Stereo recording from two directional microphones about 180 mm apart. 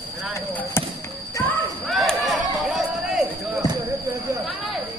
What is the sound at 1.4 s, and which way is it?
Basketball bounce, 10° left (ahead or behind).